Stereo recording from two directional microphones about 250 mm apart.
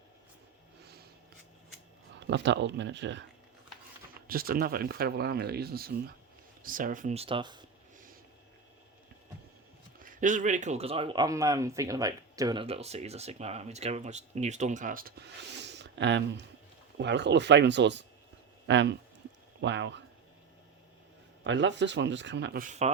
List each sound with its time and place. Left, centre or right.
2.2 s speech: right
4.3 s speech: right; by 7.6 s centre
10.0 s speech: right
21.4 s speech: right